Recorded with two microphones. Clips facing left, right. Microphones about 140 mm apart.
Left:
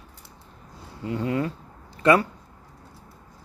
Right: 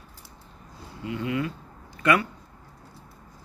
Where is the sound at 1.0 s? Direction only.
35° left (ahead or behind).